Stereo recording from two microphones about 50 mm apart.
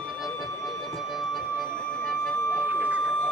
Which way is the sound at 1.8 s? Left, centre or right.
Left.